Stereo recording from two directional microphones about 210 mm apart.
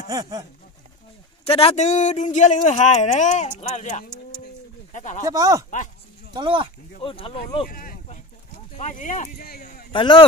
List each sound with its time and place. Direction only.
0.1 s speech: 15° right (ahead or behind)
1.4 s speech: 30° left (ahead or behind)
5.2 s speech: 15° right (ahead or behind)
7.0 s speech: 25° left (ahead or behind)
7.6 s a sound: 40° left (ahead or behind)
8.7 s speech: 35° left (ahead or behind)
9.9 s speech: 25° left (ahead or behind)